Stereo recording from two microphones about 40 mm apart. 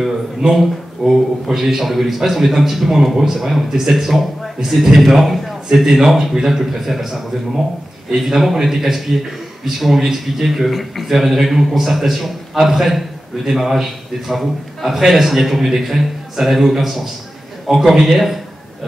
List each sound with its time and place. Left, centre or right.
0.0 s a man's voice: centre